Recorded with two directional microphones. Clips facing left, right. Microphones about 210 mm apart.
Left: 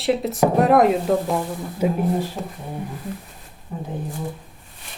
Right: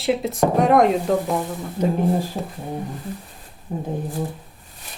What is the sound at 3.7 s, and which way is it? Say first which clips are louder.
Speech: right 3 dB; 40° right (ahead or behind).